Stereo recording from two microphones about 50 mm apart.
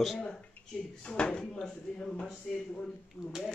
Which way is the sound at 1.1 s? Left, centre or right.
Centre.